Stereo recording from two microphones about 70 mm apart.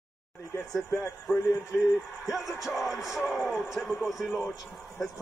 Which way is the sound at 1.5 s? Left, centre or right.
Left.